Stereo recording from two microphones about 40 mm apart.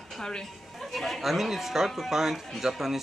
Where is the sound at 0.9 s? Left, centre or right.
Centre.